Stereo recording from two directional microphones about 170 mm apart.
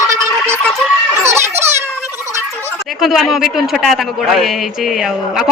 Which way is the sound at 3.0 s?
Centre (ahead or behind).